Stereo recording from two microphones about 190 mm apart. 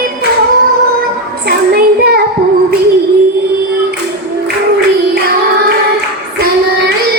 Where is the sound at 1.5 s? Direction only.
55° right (ahead or behind).